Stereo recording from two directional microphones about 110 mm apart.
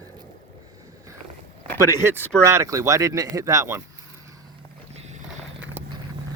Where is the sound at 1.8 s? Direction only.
25° right (ahead or behind).